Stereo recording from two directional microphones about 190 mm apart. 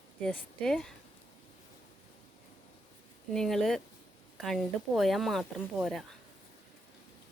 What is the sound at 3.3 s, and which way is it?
A woman's voice, centre (ahead or behind).